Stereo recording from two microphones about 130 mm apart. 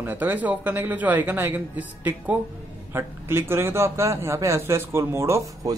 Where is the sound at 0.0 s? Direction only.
15° right (ahead or behind).